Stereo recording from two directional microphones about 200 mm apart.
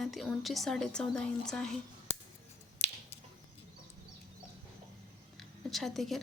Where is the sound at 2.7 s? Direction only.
30° left (ahead or behind).